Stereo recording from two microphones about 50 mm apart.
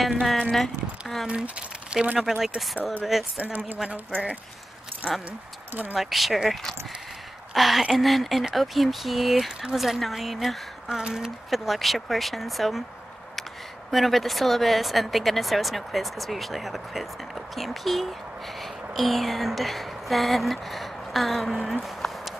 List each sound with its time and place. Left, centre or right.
0.5 s speech: centre
1.2 s speech: right
2.1 s speech: centre
2.8 s speech: left
5.0 s speech: left
5.7 s speech: right
5.9 s speech: centre
10.9 s speech: centre
11.5 s a woman's voice: centre
21.8 s a sound: centre